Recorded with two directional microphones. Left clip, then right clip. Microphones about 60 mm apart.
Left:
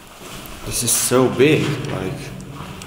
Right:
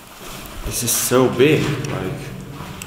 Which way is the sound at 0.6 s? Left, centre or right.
Centre.